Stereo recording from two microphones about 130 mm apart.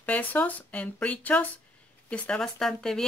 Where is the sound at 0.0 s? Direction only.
10° left (ahead or behind).